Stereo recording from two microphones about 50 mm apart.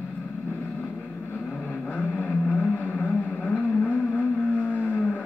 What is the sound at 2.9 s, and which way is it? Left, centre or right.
Vehicle, left.